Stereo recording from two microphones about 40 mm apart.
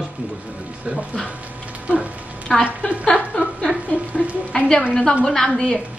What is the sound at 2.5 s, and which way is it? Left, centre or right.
Speech, centre.